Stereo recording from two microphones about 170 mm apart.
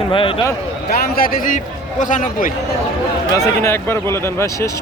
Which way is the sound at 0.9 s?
60° left (ahead or behind).